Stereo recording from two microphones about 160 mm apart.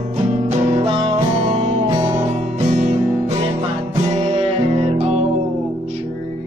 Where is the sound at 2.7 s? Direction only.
45° right (ahead or behind).